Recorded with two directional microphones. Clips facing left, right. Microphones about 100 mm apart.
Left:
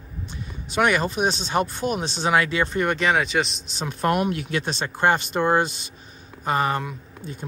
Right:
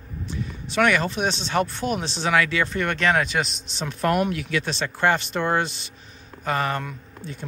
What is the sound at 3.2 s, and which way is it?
Speech, centre (ahead or behind).